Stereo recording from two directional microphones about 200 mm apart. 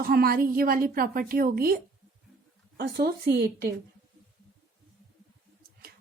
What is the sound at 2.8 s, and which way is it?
Speech, 50° right (ahead or behind).